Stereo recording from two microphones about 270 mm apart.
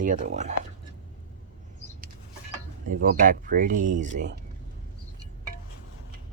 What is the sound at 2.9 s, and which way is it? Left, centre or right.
Speech, right.